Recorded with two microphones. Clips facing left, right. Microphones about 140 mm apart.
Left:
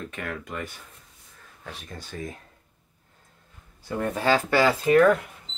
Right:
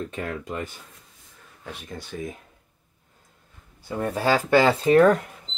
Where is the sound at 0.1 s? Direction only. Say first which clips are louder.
Right 3 dB; 30° right (ahead or behind).